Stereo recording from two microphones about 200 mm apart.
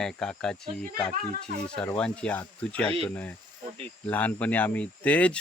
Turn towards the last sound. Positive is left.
turn(degrees=5)  # may be behind; listen again after turning